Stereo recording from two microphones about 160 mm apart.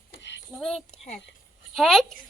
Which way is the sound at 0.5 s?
5° left (ahead or behind).